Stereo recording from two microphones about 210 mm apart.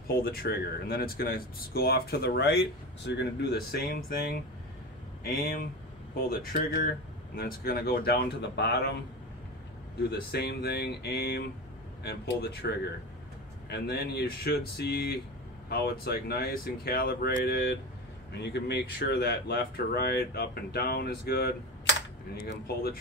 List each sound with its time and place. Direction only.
0.1 s speech: 45° left (ahead or behind)
10.0 s speech: 50° left (ahead or behind)